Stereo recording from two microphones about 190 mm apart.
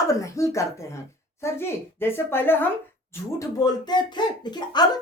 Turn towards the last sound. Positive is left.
turn(degrees=20)  # may be behind; listen again after turning